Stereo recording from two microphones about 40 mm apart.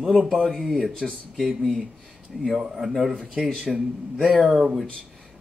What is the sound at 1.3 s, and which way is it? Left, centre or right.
Speech, centre.